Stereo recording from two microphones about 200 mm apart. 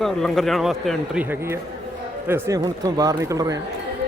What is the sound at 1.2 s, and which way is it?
Speech, 15° right (ahead or behind).